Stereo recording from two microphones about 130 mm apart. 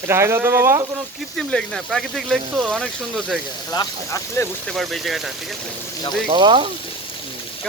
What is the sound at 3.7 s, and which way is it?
Speech, 25° left (ahead or behind).